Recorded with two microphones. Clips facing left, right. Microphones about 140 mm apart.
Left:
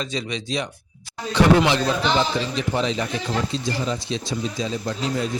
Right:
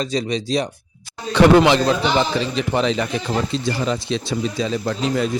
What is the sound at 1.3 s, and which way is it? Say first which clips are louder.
A man's voice: right 5 dB; 60° right (ahead or behind).